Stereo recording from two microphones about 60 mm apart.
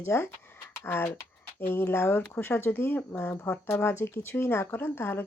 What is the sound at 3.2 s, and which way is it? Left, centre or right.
Speech, left.